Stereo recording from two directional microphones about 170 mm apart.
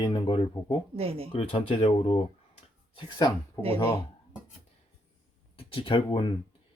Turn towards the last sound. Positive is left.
turn(degrees=30)  # may be behind; listen again after turning